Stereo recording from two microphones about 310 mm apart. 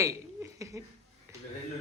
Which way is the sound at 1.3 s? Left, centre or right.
Centre.